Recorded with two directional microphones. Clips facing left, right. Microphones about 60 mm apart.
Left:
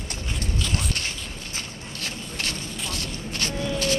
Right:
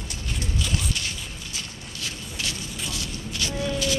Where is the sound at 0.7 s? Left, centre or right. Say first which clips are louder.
Left 1 dB; left.